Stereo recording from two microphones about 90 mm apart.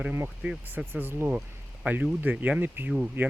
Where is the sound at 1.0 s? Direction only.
25° right (ahead or behind).